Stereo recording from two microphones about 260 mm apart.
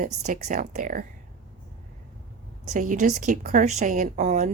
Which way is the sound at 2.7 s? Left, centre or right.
Right.